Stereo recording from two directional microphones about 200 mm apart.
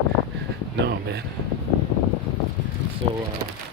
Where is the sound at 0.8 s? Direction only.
55° right (ahead or behind).